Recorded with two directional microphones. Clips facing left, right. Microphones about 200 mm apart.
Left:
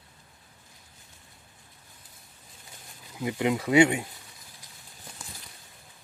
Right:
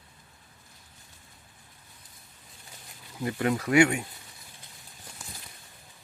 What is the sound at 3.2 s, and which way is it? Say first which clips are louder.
Speech: left 1 dB; 15° left (ahead or behind).